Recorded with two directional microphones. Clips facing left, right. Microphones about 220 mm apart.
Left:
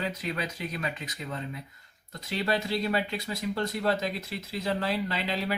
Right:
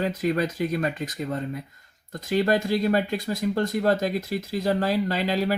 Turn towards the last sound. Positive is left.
turn(degrees=-45)  # may be behind; listen again after turning